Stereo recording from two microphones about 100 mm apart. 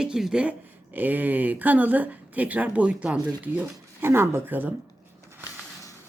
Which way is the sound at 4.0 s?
25° right (ahead or behind).